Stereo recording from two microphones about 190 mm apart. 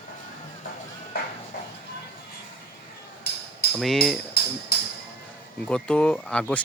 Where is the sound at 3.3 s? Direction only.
55° left (ahead or behind).